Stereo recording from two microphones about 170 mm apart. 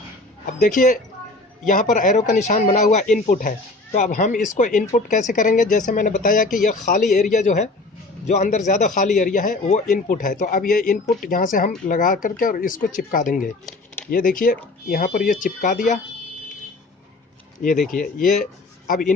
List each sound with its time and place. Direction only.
0.6 s a man's voice: 50° left (ahead or behind)
17.8 s a man's voice: 55° left (ahead or behind)